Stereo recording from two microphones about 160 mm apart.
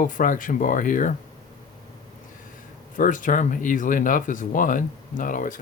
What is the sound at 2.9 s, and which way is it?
Speech, 55° left (ahead or behind).